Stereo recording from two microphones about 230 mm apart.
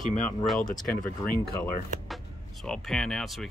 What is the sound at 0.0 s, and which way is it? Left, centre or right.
Speech, left.